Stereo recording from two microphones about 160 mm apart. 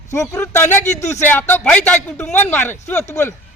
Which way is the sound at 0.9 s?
45° left (ahead or behind).